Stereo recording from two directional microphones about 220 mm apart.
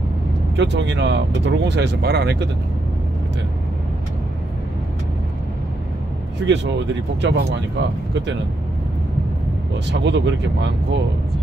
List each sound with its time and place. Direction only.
0.6 s speech: 50° right (ahead or behind)
6.4 s speech: 55° right (ahead or behind)
9.8 s speech: 55° right (ahead or behind)